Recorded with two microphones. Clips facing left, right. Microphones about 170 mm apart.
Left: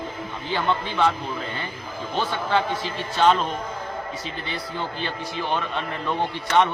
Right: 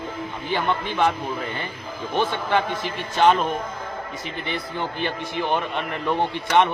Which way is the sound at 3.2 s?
15° right (ahead or behind).